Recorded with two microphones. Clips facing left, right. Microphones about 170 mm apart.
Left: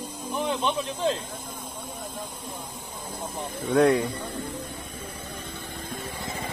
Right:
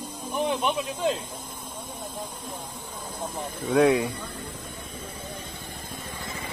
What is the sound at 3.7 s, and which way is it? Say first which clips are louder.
Speech: even; centre (ahead or behind).